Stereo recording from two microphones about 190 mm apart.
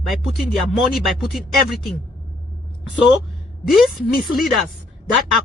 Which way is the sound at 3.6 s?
Centre (ahead or behind).